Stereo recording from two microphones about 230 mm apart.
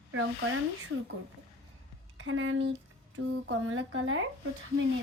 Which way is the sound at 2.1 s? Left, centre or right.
Right.